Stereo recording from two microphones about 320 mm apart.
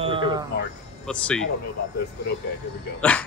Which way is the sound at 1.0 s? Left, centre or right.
Centre.